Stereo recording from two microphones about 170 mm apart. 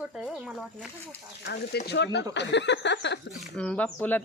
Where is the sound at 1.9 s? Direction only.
90° left.